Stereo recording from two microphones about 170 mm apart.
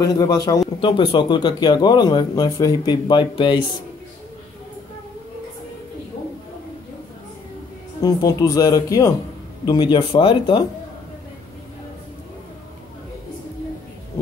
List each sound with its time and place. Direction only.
0.0 s speech: 20° left (ahead or behind)
8.0 s speech: 20° left (ahead or behind)